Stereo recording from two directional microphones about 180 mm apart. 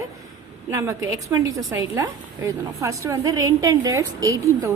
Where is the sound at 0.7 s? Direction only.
15° right (ahead or behind).